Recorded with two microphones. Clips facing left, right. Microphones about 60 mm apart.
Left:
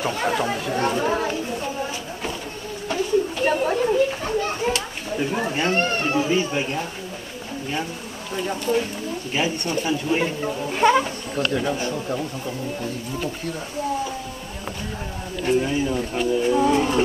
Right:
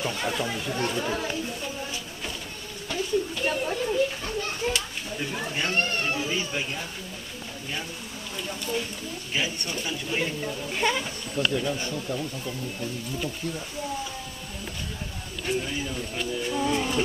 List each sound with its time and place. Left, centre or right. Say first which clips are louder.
0.0 s speech: left 6 dB; left
2.9 s a sound: left 6 dB; left
3.9 s a child's voice: left 6 dB; left
8.4 s speech: left 8 dB; left
11.7 s speech: left 5 dB; left
15.4 s speech: left 8 dB; centre